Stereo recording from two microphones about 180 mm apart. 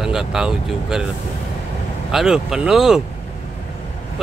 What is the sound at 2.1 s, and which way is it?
Speech, 5° right (ahead or behind).